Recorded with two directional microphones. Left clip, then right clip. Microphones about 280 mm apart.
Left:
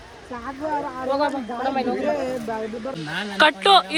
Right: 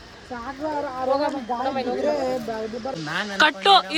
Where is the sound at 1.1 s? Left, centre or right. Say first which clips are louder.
Left 1 dB; left.